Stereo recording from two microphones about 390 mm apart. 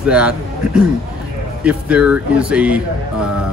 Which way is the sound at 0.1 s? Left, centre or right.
Centre.